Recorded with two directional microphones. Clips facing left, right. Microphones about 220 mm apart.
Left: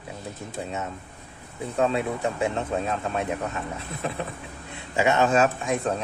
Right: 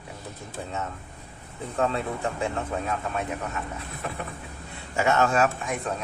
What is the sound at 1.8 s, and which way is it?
A man's voice, 20° left (ahead or behind).